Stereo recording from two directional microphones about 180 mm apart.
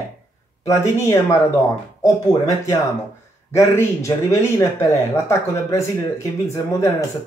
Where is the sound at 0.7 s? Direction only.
15° left (ahead or behind).